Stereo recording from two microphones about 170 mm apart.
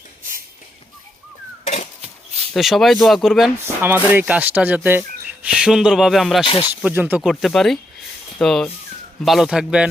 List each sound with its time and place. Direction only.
1.6 s a sound: 40° left (ahead or behind)
2.5 s speech: centre (ahead or behind)
6.4 s speech: 30° left (ahead or behind)
6.8 s speech: 10° right (ahead or behind)